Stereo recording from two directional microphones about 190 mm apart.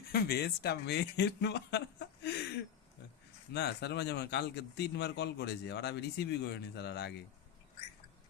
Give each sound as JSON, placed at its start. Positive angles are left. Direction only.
{"t": 0.1, "sound": "speech", "side_deg": 55}
{"t": 3.5, "sound": "speech", "side_deg": 60}